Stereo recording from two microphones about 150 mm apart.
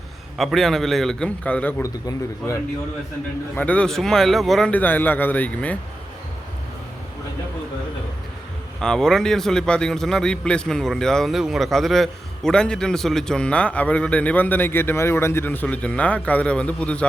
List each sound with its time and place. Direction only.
0.3 s a man's voice: centre (ahead or behind)
1.8 s a man's voice: 20° left (ahead or behind)
3.5 s a man's voice: 10° left (ahead or behind)
8.8 s a man's voice: 5° left (ahead or behind)